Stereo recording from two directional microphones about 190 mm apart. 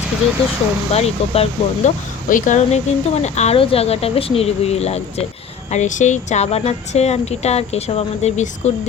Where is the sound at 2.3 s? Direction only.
45° left (ahead or behind).